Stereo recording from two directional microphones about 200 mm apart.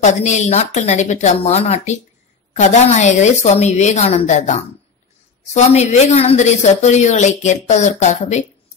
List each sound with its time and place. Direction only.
0.0 s speech: 35° left (ahead or behind)